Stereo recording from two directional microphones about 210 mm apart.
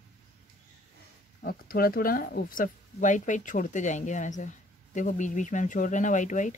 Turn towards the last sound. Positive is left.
turn(degrees=35)  # may be behind; listen again after turning